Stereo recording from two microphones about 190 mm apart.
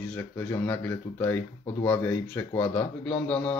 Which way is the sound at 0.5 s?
10° left (ahead or behind).